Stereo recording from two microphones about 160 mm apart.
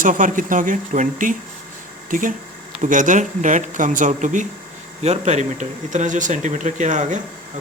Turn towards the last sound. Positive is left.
turn(degrees=-50)  # may be behind; listen again after turning